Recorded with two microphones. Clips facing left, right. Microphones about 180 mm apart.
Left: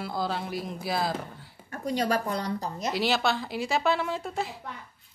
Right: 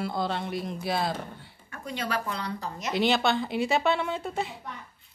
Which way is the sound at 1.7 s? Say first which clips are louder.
Left 5 dB; 40° left (ahead or behind).